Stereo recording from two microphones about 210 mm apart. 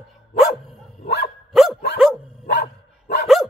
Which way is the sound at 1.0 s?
50° left (ahead or behind).